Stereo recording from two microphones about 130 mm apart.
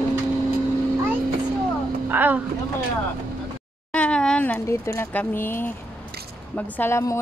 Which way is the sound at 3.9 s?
10° left (ahead or behind).